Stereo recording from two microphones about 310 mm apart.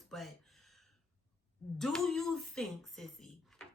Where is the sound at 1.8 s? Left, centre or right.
Centre.